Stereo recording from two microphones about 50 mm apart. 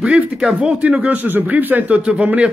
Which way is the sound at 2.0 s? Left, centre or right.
Right.